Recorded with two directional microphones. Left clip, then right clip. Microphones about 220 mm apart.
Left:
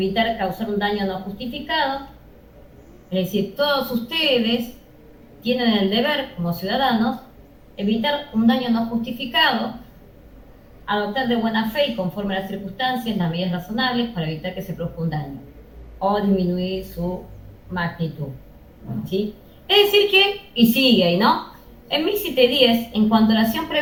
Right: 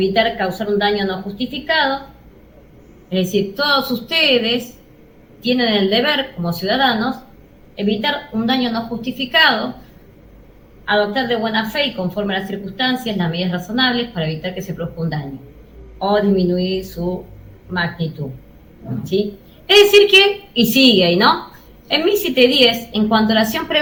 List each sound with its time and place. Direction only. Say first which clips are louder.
0.0 s a woman's voice: right 5 dB; 50° right (ahead or behind)
3.1 s a woman's voice: right 5 dB; 50° right (ahead or behind)
10.8 s a woman's voice: right 5 dB; 50° right (ahead or behind)
19.6 s a woman's voice: right 6 dB; 50° right (ahead or behind)